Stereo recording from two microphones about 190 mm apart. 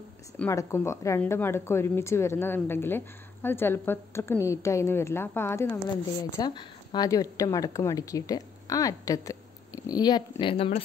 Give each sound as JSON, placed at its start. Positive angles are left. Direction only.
{"t": 0.4, "sound": "speech", "side_deg": 15}